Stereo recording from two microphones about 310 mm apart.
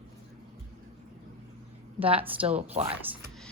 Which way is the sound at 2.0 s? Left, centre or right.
Centre.